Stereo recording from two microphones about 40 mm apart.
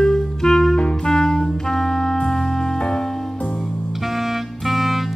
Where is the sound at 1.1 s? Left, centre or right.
Centre.